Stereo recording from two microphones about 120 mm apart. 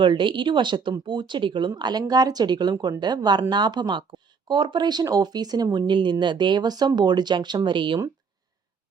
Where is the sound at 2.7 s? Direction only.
25° right (ahead or behind).